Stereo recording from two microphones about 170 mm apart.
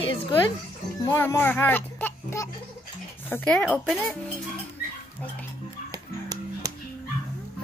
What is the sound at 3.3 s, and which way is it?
Music, 10° left (ahead or behind).